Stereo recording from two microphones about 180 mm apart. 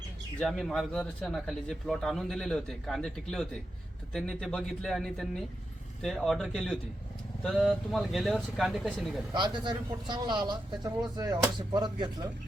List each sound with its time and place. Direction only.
0.3 s speech: centre (ahead or behind)
9.3 s speech: 25° right (ahead or behind)